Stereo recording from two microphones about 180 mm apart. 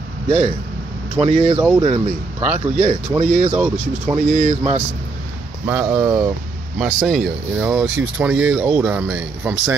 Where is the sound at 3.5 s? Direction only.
5° right (ahead or behind).